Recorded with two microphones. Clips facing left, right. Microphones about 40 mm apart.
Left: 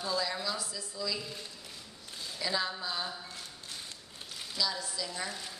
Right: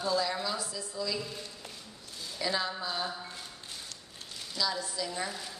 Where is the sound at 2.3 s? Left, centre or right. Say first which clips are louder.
Right 1 dB; centre.